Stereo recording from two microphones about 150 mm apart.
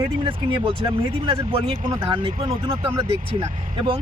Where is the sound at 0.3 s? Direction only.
35° right (ahead or behind).